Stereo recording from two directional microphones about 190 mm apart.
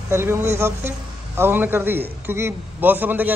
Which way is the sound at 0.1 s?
15° right (ahead or behind).